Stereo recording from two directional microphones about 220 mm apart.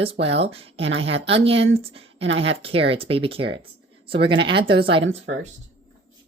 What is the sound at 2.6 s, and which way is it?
Speech, 25° right (ahead or behind).